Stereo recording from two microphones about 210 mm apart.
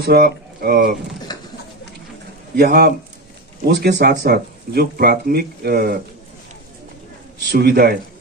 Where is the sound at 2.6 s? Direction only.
50° right (ahead or behind).